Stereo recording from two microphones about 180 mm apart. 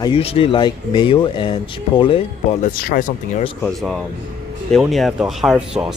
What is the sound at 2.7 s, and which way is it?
Speech, 50° left (ahead or behind).